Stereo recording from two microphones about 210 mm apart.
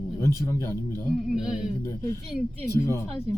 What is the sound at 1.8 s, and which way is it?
Speech, 15° left (ahead or behind).